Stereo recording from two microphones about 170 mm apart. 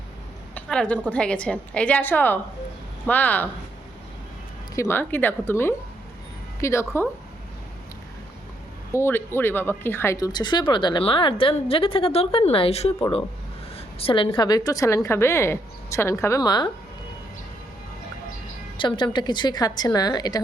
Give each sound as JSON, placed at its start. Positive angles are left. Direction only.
{"t": 0.5, "sound": "a sound", "side_deg": 5}
{"t": 1.0, "sound": "a woman's voice", "side_deg": 5}
{"t": 4.7, "sound": "a woman's voice", "side_deg": 15}
{"t": 8.9, "sound": "speech", "side_deg": 15}
{"t": 18.8, "sound": "speech", "side_deg": 30}